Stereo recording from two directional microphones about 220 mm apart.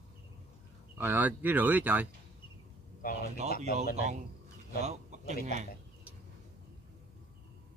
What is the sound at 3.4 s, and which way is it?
Speech, 30° right (ahead or behind).